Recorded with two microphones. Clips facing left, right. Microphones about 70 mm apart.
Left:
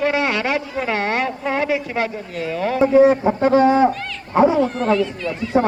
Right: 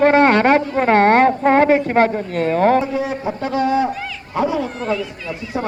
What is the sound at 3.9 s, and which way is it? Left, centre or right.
Speech, centre.